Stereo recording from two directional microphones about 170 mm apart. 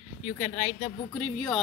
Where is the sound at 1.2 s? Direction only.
5° left (ahead or behind).